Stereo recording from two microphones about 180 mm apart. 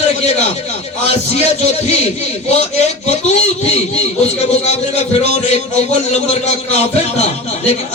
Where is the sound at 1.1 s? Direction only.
35° left (ahead or behind).